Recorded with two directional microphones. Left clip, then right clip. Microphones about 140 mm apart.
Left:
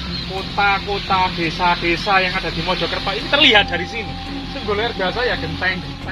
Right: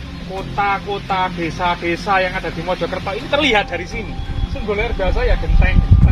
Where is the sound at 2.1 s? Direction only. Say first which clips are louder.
Right 1 dB; 35° right (ahead or behind).